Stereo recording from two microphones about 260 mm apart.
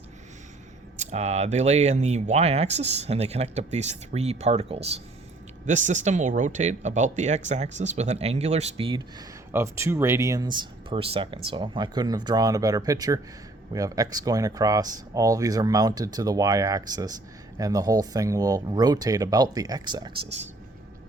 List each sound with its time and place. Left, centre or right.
0.9 s speech: right
9.5 s speech: centre